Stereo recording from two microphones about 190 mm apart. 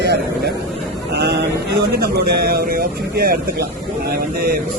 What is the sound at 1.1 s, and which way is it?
Speech, 60° right (ahead or behind).